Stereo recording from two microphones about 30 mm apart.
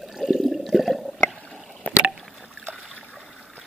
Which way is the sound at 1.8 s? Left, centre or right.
Left.